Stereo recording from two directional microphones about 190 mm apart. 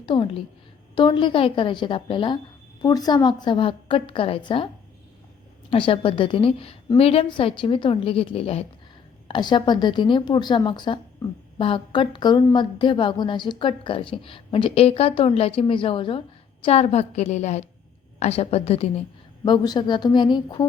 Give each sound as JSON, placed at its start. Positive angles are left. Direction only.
{"t": 0.0, "sound": "a woman's voice", "side_deg": 25}
{"t": 5.7, "sound": "a woman's voice", "side_deg": 30}
{"t": 19.5, "sound": "a woman's voice", "side_deg": 20}